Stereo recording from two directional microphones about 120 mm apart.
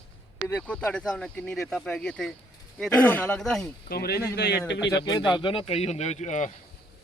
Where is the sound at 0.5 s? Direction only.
10° left (ahead or behind).